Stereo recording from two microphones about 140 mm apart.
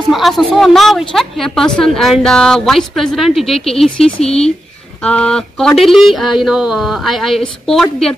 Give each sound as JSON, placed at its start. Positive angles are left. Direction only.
{"t": 0.1, "sound": "a woman's voice", "side_deg": 0}